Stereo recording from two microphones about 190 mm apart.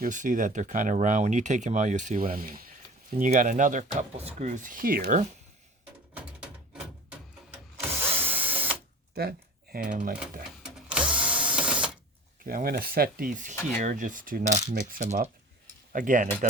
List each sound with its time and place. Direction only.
0.0 s speech: 45° right (ahead or behind)
8.0 s a sound: 10° right (ahead or behind)
9.1 s typing: 55° right (ahead or behind)
10.6 s a sound: 5° right (ahead or behind)
12.5 s cutlery: 50° right (ahead or behind)
14.7 s speech: 40° right (ahead or behind)
15.9 s cutlery: 45° right (ahead or behind)